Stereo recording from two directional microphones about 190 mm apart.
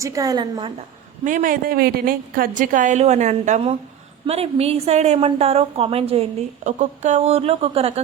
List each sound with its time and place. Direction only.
0.0 s a woman's voice: 20° right (ahead or behind)
1.2 s a woman's voice: 45° right (ahead or behind)